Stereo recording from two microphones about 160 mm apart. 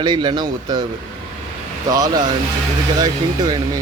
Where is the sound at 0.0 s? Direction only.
30° right (ahead or behind).